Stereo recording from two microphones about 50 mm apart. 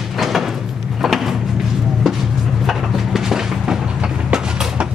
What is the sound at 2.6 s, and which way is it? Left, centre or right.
Train, centre.